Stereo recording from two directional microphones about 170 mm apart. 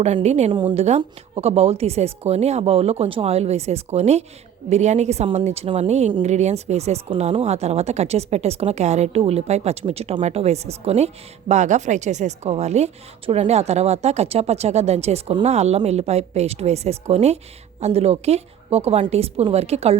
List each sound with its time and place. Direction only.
0.0 s speech: 40° right (ahead or behind)